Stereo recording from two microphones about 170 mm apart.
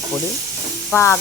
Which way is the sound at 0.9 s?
15° left (ahead or behind).